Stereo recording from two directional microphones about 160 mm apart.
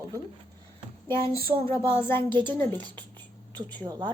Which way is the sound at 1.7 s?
15° left (ahead or behind).